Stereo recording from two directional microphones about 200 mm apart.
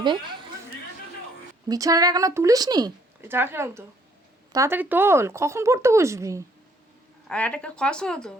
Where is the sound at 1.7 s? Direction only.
20° right (ahead or behind).